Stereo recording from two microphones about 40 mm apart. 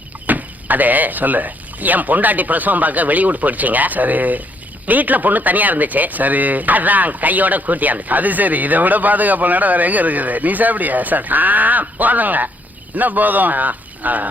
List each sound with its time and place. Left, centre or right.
0.3 s speech: right